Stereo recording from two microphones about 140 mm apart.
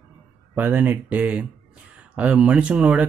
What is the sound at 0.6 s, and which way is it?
Speech, 15° right (ahead or behind).